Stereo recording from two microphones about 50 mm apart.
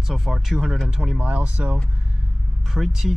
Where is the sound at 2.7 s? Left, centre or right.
Centre.